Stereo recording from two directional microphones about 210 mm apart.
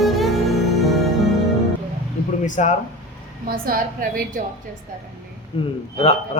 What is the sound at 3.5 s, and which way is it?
Speech, 45° right (ahead or behind).